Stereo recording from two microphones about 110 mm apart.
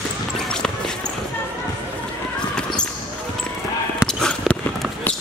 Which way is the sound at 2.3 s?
10° left (ahead or behind).